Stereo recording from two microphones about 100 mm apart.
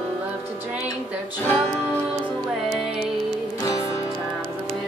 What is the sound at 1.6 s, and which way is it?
Music, 10° left (ahead or behind).